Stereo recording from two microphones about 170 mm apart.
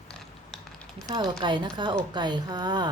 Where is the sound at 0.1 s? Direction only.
5° left (ahead or behind).